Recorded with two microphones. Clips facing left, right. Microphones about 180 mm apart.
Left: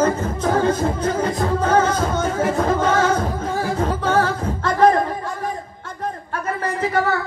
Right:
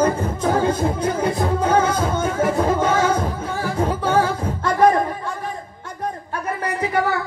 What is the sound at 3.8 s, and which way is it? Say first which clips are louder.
A capella: right 2 dB; 10° right (ahead or behind).